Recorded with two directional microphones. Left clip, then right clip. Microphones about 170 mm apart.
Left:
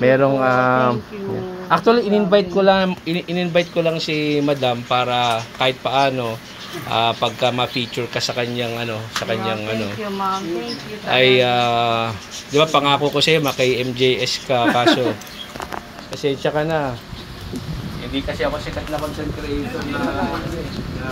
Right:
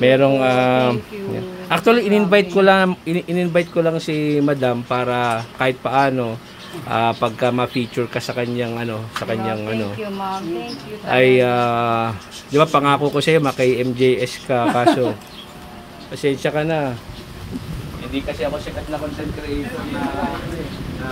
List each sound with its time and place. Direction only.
0.0 s a sound: 75° right (ahead or behind)
1.7 s a man's voice: 65° right (ahead or behind)
3.1 s speech: 45° right (ahead or behind)
11.1 s speech: 45° right (ahead or behind)
16.2 s speech: 35° right (ahead or behind)
18.4 s speech: 10° right (ahead or behind)